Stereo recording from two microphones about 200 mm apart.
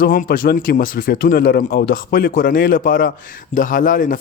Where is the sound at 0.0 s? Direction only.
45° left (ahead or behind).